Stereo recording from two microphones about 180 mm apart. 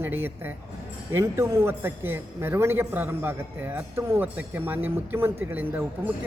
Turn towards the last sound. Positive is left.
turn(degrees=-10)  # may be behind; listen again after turning